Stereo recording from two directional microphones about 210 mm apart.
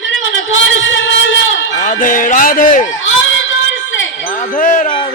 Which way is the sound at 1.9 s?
40° left (ahead or behind).